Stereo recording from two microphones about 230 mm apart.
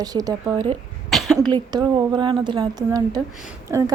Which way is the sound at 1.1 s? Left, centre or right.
Centre.